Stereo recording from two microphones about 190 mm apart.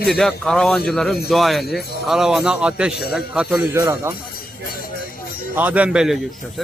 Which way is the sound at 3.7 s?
15° right (ahead or behind).